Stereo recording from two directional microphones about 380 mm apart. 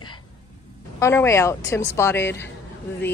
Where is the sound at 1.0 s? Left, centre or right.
Centre.